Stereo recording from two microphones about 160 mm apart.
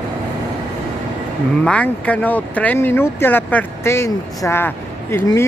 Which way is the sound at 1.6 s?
10° left (ahead or behind).